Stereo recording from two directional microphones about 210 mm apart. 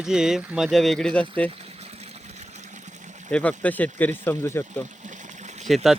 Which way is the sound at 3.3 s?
5° left (ahead or behind).